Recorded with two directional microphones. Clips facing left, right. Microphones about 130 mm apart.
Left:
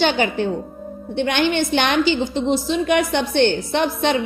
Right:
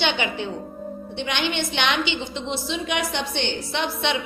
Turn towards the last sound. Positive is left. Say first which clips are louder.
# left 6 dB
turn(degrees=45)  # may be behind; listen again after turning